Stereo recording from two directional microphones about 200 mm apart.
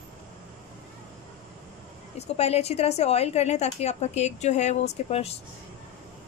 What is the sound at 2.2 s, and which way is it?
A woman's voice, 30° left (ahead or behind).